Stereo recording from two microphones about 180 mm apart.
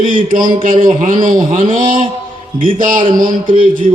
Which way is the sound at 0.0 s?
30° right (ahead or behind).